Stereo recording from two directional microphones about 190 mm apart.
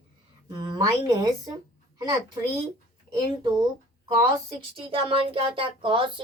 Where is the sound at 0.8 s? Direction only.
20° right (ahead or behind).